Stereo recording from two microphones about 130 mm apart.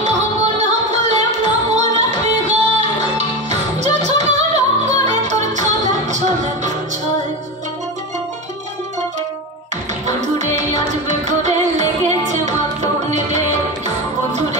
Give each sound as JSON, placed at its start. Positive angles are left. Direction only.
{"t": 0.6, "sound": "music", "side_deg": -60}
{"t": 10.0, "sound": "music", "side_deg": -65}